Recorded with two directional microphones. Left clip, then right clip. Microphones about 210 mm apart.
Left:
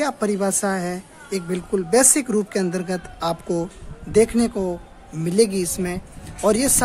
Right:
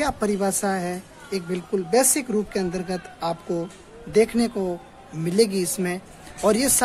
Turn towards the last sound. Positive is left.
turn(degrees=10)  # may be behind; listen again after turning